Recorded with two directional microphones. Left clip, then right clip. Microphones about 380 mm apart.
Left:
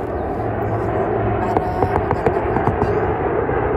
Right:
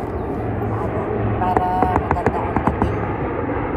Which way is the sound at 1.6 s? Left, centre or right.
Centre.